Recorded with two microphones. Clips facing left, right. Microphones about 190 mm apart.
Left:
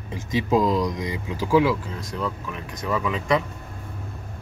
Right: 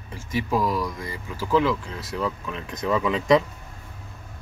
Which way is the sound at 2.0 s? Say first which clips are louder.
Right 1 dB; 5° right (ahead or behind).